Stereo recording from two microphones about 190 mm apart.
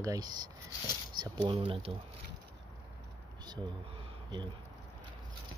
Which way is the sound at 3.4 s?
20° right (ahead or behind).